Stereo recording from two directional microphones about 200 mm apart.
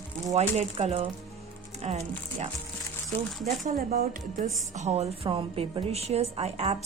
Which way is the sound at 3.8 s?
45° right (ahead or behind).